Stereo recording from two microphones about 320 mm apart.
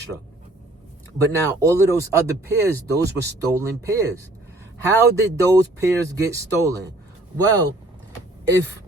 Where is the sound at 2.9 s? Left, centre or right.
Right.